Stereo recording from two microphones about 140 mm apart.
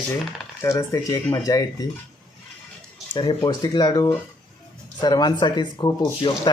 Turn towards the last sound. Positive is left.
turn(degrees=35)  # may be behind; listen again after turning